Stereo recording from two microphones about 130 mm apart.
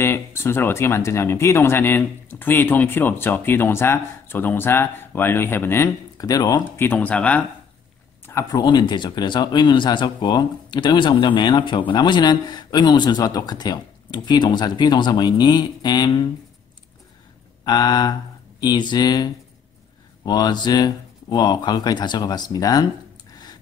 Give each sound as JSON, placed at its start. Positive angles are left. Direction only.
{"t": 0.0, "sound": "speech", "side_deg": 20}
{"t": 6.2, "sound": "speech", "side_deg": 30}
{"t": 6.8, "sound": "speech", "side_deg": 15}
{"t": 8.4, "sound": "speech", "side_deg": 30}
{"t": 17.6, "sound": "speech", "side_deg": 30}